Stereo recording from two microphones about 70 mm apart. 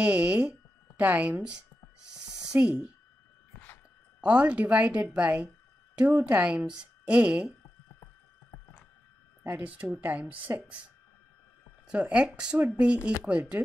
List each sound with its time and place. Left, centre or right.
0.0 s speech: centre
2.5 s a woman's voice: centre
4.2 s speech: centre
9.6 s a woman's voice: right
11.9 s a woman's voice: centre